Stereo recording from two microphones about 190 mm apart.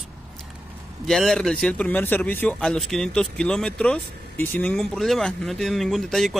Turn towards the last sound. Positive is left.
turn(degrees=0)  # may be behind; listen again after turning